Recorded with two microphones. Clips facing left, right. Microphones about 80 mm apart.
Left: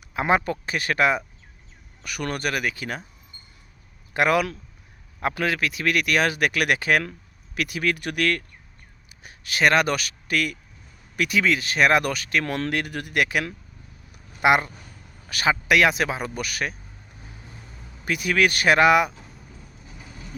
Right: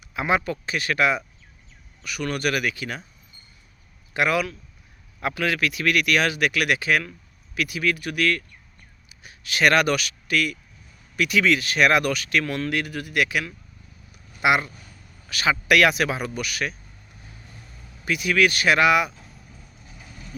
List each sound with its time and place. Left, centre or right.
0.1 s speech: left
2.4 s speech: left
4.1 s speech: left
5.2 s speech: left
9.6 s speech: left
11.2 s speech: left
12.5 s speech: left
15.6 s speech: left
18.0 s speech: left
19.8 s vehicle: centre